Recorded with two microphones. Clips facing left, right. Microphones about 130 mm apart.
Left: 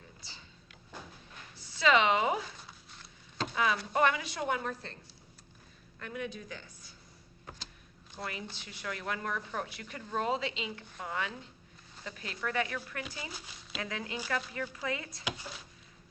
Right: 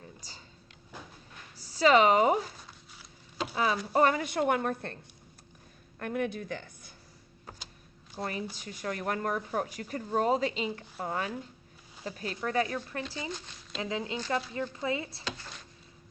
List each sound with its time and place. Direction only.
0.2 s a sound: 40° right (ahead or behind)
1.5 s speech: 40° right (ahead or behind)
2.9 s a sound: 5° right (ahead or behind)
3.5 s a woman's voice: 35° right (ahead or behind); by 4.9 s 55° right (ahead or behind)
6.0 s a woman's voice: 55° right (ahead or behind)
8.1 s speech: 40° right (ahead or behind)
15.2 s speech: 10° left (ahead or behind)